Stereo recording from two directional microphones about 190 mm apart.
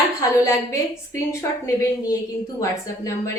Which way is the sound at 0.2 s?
15° left (ahead or behind).